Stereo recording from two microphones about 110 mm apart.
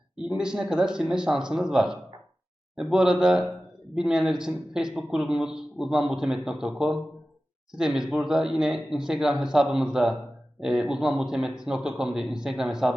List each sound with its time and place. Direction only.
0.3 s a man's voice: 5° right (ahead or behind)